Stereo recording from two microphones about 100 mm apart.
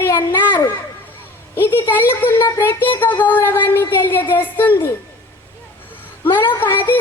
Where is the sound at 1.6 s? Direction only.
20° left (ahead or behind).